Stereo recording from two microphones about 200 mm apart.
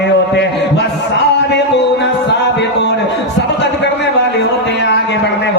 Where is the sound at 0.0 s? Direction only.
60° left (ahead or behind).